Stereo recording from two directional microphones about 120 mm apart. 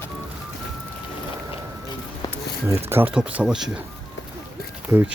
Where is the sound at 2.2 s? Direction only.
30° left (ahead or behind).